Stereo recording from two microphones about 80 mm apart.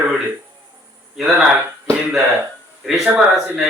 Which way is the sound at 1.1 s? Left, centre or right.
Centre.